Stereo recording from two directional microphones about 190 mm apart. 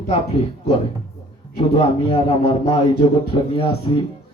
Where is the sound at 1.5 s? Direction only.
30° left (ahead or behind).